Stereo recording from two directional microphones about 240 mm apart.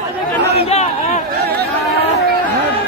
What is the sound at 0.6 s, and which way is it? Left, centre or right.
Speech, left.